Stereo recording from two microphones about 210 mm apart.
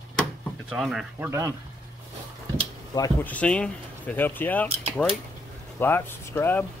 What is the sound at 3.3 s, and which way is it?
Speech, 5° left (ahead or behind).